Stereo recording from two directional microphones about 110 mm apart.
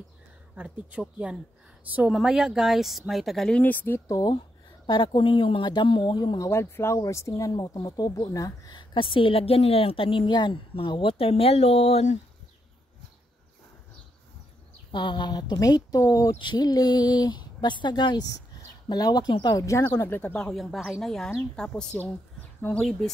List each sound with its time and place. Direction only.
0.6 s speech: 10° right (ahead or behind); by 4.0 s 20° left (ahead or behind)
4.8 s speech: 45° left (ahead or behind)
6.5 s speech: 25° left (ahead or behind)
8.7 s speech: 50° left (ahead or behind); by 12.2 s 80° left
14.9 s speech: 45° left (ahead or behind); by 16.3 s 30° left (ahead or behind)
16.3 s speech: 40° left (ahead or behind); by 20.2 s 20° left (ahead or behind)
20.2 s speech: 10° left (ahead or behind)